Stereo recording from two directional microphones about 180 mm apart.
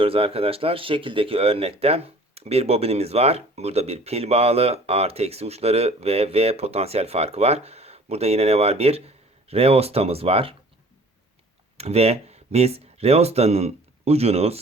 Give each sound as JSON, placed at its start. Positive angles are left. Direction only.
{"t": 0.0, "sound": "speech", "side_deg": -30}
{"t": 11.8, "sound": "speech", "side_deg": -35}